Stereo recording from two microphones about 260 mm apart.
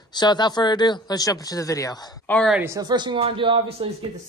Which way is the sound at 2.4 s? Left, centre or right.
Centre.